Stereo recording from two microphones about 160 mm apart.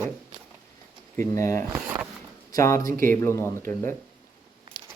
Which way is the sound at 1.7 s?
20° right (ahead or behind).